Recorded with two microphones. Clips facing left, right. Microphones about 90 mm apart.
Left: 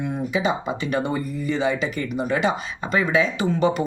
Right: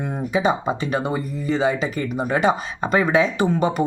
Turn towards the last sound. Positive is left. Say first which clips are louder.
# right 1 dB
turn(degrees=-40)  # may be behind; listen again after turning